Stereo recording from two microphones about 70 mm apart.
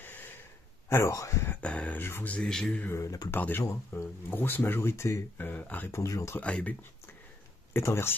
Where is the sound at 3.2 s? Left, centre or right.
Left.